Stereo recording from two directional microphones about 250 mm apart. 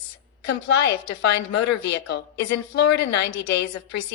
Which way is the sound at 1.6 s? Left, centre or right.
Left.